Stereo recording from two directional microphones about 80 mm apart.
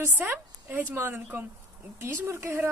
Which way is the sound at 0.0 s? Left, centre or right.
Right.